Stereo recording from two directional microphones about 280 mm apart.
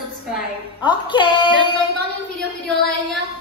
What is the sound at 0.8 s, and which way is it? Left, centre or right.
Speech, centre.